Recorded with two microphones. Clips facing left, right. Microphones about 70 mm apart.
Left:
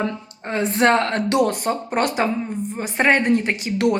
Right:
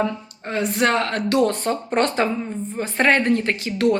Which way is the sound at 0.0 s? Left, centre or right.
Left.